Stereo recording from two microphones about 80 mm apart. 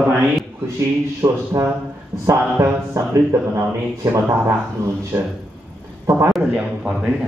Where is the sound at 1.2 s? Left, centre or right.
Right.